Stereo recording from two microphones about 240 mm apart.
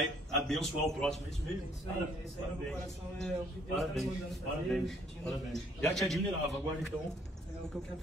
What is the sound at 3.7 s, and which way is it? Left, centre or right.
A man's voice, centre.